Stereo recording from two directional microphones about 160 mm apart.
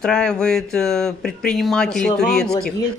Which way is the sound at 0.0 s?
5° left (ahead or behind).